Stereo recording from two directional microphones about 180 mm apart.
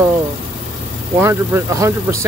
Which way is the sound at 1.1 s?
15° right (ahead or behind).